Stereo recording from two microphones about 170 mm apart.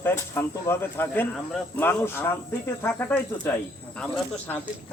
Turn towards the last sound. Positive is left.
turn(degrees=10)  # may be behind; listen again after turning